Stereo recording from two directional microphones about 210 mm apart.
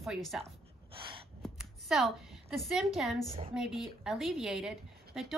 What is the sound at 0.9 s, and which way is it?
Gasp, 25° right (ahead or behind).